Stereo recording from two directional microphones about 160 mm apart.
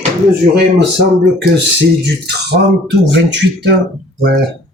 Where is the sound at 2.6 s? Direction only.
65° right (ahead or behind).